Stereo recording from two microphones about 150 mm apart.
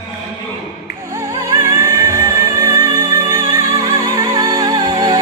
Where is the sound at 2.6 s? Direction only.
20° right (ahead or behind).